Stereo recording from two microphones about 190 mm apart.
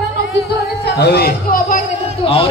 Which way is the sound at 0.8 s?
60° left (ahead or behind).